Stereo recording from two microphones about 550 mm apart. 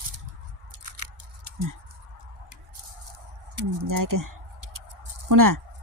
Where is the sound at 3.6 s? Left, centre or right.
Right.